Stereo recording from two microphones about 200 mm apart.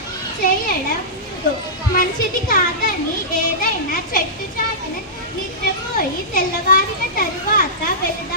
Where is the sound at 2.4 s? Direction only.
45° left (ahead or behind).